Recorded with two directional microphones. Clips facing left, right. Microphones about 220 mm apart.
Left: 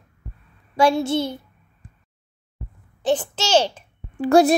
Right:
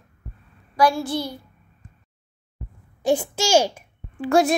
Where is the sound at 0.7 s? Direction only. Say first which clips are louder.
Left 2 dB; 25° left (ahead or behind).